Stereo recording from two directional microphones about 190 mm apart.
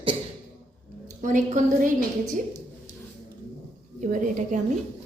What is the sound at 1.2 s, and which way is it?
A woman's voice, 40° right (ahead or behind).